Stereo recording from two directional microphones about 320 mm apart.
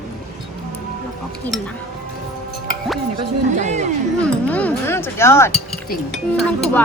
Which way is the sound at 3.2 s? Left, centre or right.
Right.